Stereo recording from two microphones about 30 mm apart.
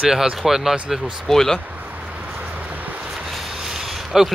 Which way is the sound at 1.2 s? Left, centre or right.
Centre.